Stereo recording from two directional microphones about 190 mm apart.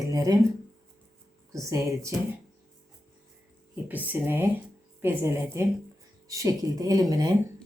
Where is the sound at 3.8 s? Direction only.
10° right (ahead or behind).